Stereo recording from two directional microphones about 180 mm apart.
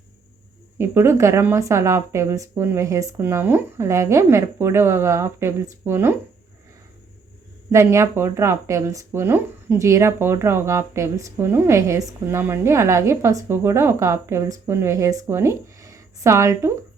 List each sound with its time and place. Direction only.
0.8 s speech: 15° right (ahead or behind)
7.7 s speech: 15° right (ahead or behind)